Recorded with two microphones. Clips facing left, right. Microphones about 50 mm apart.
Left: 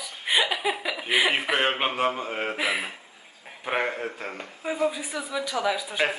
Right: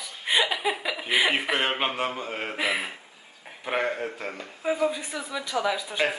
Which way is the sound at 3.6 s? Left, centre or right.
Centre.